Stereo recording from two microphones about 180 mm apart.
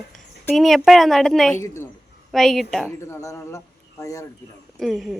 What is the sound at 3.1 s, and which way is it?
A man's voice, 15° left (ahead or behind).